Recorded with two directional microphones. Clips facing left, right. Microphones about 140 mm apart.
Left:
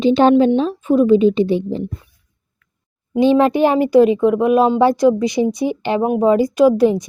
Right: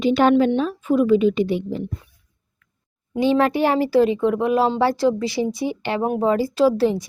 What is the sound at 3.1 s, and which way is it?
A woman's voice, 20° left (ahead or behind).